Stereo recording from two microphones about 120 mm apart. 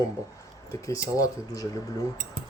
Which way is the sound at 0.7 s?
25° left (ahead or behind).